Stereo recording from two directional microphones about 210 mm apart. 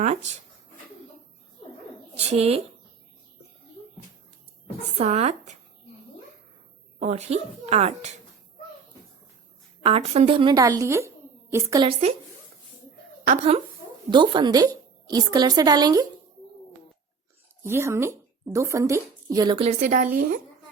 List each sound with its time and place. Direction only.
0.0 s speech: 30° right (ahead or behind)
2.1 s a woman's voice: 30° right (ahead or behind)
4.9 s speech: 30° right (ahead or behind)
7.0 s speech: 30° right (ahead or behind)
9.8 s a woman's voice: 30° right (ahead or behind)
13.2 s speech: 35° right (ahead or behind)
14.1 s a woman's voice: 20° right (ahead or behind)
17.6 s a woman's voice: 10° right (ahead or behind); by 20.4 s 35° right (ahead or behind)